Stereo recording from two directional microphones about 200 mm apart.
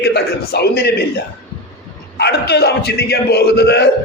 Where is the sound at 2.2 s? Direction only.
55° left (ahead or behind).